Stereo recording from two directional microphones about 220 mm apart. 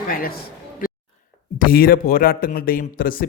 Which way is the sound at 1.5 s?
40° left (ahead or behind).